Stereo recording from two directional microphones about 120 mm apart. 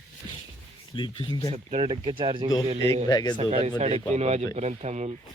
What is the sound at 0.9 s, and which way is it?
Speech, 40° left (ahead or behind).